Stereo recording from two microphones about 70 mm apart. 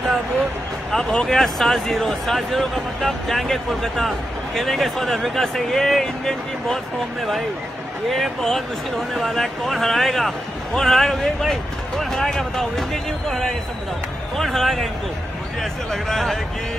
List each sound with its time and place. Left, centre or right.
0.9 s speech: centre